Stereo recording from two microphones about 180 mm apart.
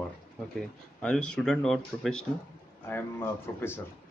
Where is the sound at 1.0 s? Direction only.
5° left (ahead or behind).